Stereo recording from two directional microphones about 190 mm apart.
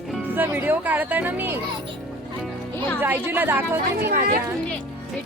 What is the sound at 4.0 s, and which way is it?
Speech, 50° right (ahead or behind).